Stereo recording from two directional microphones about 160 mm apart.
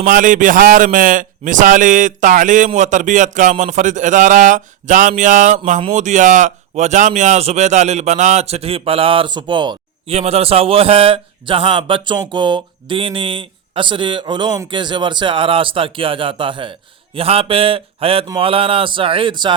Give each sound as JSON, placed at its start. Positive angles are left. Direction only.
{"t": 0.0, "sound": "a man's voice", "side_deg": -55}